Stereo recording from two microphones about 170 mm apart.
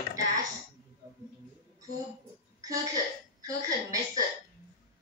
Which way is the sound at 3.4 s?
20° right (ahead or behind).